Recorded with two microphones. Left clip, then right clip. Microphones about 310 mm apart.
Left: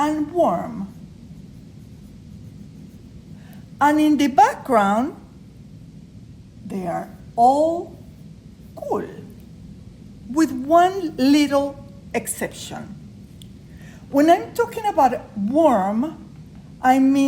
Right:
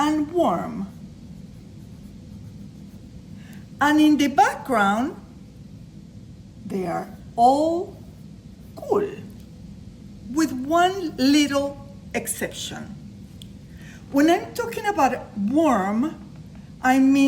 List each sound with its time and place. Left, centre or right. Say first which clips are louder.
0.3 s a woman's voice: left 4 dB; centre
3.8 s a woman's voice: left 1 dB; centre
6.7 s a woman's voice: even; centre
8.7 s a man's voice: right 2 dB; centre
10.3 s a woman's voice: left 5 dB; centre
14.1 s a woman's voice: left 4 dB; centre